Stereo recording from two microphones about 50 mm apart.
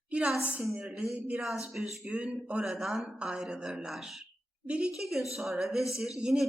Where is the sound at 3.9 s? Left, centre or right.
Centre.